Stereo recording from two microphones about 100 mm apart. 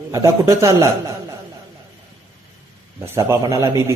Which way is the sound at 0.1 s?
30° right (ahead or behind).